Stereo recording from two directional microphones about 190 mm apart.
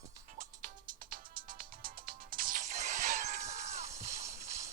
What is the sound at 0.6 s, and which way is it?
Music, 45° right (ahead or behind).